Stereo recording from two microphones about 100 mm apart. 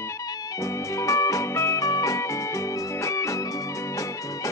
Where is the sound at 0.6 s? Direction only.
30° left (ahead or behind).